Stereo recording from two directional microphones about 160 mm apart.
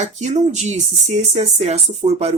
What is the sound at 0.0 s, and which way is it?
Speech, 45° right (ahead or behind).